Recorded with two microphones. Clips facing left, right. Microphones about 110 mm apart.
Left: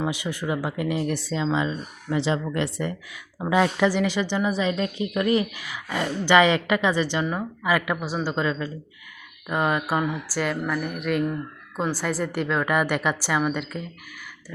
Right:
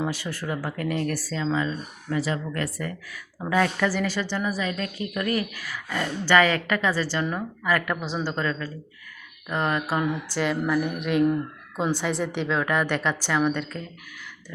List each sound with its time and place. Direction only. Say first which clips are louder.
0.1 s a woman's voice: left 3 dB; 15° left (ahead or behind)